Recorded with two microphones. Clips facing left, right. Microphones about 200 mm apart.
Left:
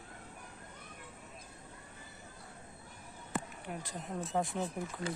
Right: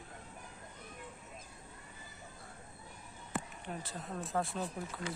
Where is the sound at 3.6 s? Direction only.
10° left (ahead or behind).